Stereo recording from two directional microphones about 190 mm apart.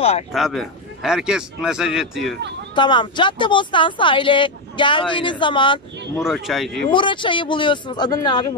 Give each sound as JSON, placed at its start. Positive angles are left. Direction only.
{"t": 0.3, "sound": "a man's voice", "side_deg": 0}
{"t": 2.7, "sound": "speech", "side_deg": 25}
{"t": 6.2, "sound": "a man's voice", "side_deg": 0}
{"t": 6.9, "sound": "speech", "side_deg": 25}